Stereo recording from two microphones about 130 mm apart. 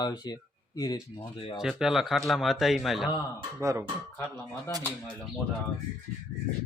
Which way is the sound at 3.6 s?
20° right (ahead or behind).